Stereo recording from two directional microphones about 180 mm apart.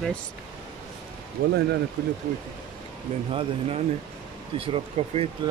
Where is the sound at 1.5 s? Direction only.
65° right (ahead or behind).